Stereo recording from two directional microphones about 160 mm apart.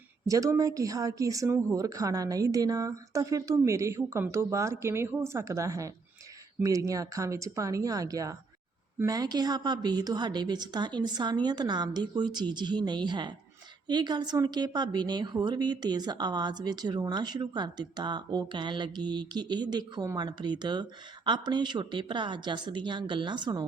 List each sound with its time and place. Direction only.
0.3 s a woman's voice: 20° right (ahead or behind)